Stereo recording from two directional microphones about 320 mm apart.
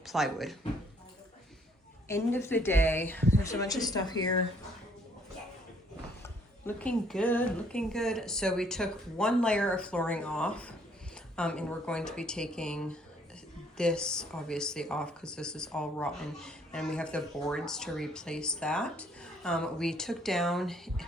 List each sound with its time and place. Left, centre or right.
0.0 s speech: centre
2.0 s a woman's voice: centre
6.2 s speech: centre